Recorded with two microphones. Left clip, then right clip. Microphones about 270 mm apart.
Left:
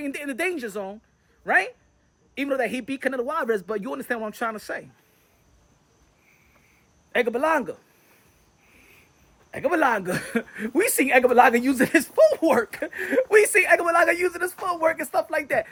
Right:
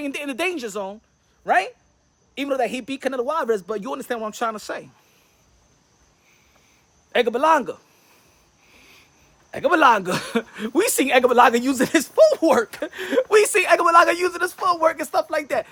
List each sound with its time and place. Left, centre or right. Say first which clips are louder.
0.0 s speech: right 2 dB; centre
7.1 s speech: right 4 dB; centre
8.7 s a sound: right 4 dB; right
9.5 s speech: right 6 dB; centre